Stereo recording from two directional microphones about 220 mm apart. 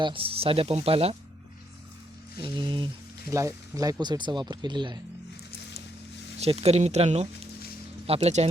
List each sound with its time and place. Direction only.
0.0 s speech: 25° right (ahead or behind)
2.4 s speech: 20° right (ahead or behind)
6.4 s speech: 30° right (ahead or behind)